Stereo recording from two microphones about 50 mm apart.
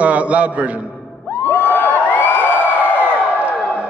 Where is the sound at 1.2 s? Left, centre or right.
Left.